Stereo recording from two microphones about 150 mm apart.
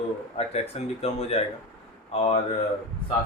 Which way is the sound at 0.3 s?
45° left (ahead or behind).